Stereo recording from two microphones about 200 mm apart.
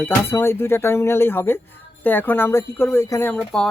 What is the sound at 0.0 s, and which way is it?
Speech, 10° left (ahead or behind).